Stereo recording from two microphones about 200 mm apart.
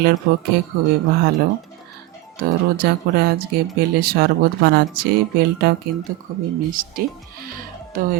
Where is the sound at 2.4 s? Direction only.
50° right (ahead or behind).